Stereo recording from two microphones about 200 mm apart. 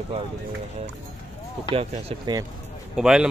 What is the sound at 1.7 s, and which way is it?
Speech, 30° right (ahead or behind).